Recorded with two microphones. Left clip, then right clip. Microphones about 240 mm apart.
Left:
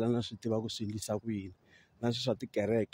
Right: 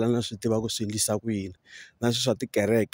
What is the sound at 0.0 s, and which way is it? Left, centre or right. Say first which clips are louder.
Speech: right 7 dB; right.